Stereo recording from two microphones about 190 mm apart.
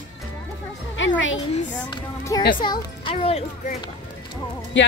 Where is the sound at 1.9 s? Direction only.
25° left (ahead or behind).